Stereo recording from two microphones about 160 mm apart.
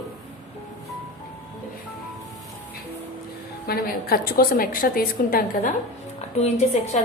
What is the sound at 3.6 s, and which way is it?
A woman's voice, 70° left (ahead or behind).